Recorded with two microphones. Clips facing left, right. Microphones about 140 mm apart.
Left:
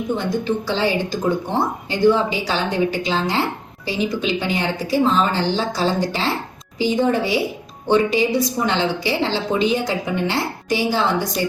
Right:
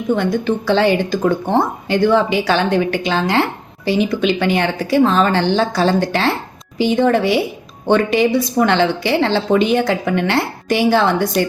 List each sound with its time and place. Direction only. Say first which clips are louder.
0.2 s speech: right 4 dB; 60° right (ahead or behind)